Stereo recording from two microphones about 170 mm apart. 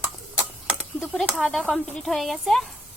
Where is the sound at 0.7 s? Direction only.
Centre (ahead or behind).